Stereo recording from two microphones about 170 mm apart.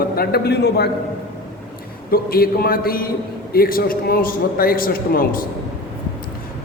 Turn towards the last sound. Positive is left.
turn(degrees=55)  # may be behind; listen again after turning